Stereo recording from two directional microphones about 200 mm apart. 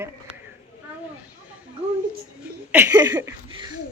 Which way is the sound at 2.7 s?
10° right (ahead or behind).